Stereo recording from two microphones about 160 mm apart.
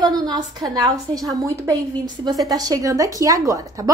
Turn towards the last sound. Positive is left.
turn(degrees=-20)  # may be behind; listen again after turning